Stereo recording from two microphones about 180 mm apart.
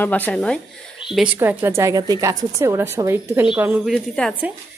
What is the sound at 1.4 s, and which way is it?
A woman's voice, 10° right (ahead or behind).